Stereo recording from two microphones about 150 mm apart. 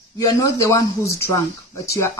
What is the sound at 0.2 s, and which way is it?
Speech, 20° left (ahead or behind).